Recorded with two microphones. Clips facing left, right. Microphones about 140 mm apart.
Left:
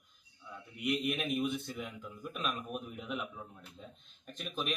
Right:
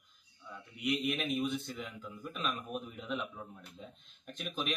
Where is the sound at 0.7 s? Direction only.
Centre (ahead or behind).